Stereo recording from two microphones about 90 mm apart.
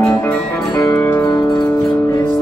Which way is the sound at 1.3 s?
45° left (ahead or behind).